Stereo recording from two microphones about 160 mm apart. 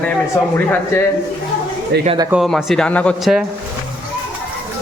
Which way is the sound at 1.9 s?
90° right.